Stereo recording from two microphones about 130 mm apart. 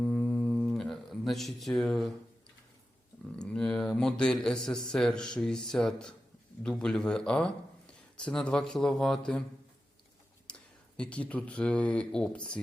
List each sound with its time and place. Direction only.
0.0 s a sound: 5° left (ahead or behind)
3.3 s a man's voice: 5° left (ahead or behind)
10.4 s speech: 10° left (ahead or behind)